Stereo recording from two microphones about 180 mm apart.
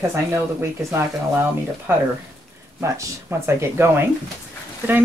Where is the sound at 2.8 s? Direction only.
15° right (ahead or behind).